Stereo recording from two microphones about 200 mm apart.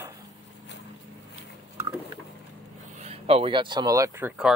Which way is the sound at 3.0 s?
30° right (ahead or behind).